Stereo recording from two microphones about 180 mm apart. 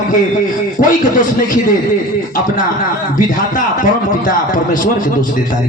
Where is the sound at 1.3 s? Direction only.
45° left (ahead or behind).